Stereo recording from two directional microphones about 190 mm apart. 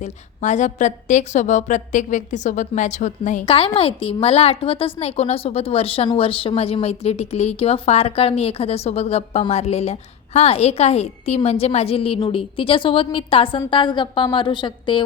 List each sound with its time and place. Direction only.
0.0 s a woman's voice: 40° left (ahead or behind)